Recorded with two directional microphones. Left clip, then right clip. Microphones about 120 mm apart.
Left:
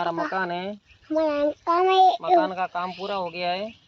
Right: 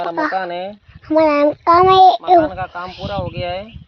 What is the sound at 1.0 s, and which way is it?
A child's voice, 50° right (ahead or behind).